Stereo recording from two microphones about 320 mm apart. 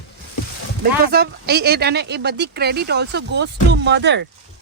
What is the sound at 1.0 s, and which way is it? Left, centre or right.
Speech, right.